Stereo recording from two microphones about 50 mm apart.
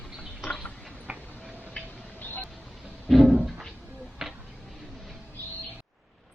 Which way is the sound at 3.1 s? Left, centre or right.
Centre.